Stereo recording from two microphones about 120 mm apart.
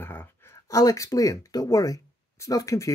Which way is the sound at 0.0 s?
15° left (ahead or behind).